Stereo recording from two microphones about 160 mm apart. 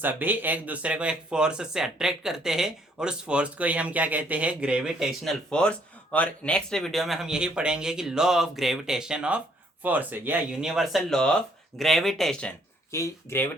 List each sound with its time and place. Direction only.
0.0 s speech: 10° right (ahead or behind); by 12.5 s 5° left (ahead or behind)
12.9 s speech: 15° left (ahead or behind)